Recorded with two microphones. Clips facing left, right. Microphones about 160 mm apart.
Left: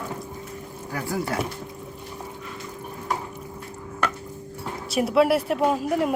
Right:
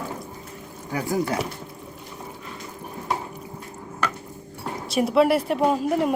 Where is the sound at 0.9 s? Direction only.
20° right (ahead or behind).